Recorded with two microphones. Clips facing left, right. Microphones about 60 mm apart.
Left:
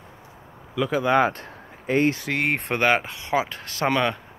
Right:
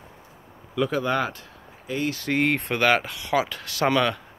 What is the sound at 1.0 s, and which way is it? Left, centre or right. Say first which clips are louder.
Speech: left 5 dB; left.